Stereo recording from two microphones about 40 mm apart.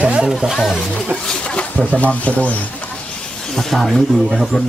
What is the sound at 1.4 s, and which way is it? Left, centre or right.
Speech, left.